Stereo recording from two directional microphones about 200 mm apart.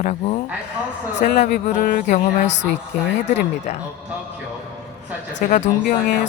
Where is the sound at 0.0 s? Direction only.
35° left (ahead or behind).